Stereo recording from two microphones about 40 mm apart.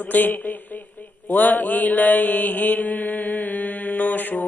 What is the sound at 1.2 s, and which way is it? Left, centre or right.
Mantra, left.